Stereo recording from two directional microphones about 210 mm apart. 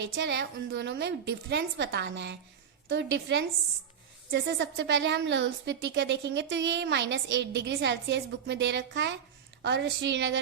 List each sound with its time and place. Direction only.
0.0 s a woman's voice: 55° right (ahead or behind)